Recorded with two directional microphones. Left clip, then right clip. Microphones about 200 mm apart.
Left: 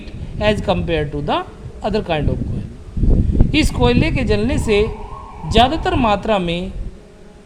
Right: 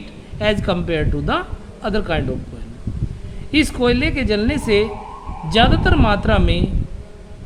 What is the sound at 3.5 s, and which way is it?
A woman's voice, 5° left (ahead or behind).